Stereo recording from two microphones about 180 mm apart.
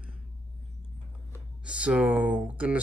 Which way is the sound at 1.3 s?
5° right (ahead or behind).